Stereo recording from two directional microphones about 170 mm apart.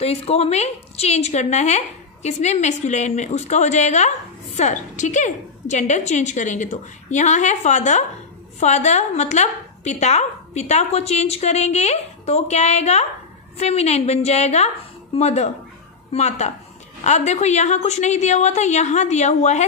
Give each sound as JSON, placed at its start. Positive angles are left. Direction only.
{"t": 0.0, "sound": "a woman's voice", "side_deg": 35}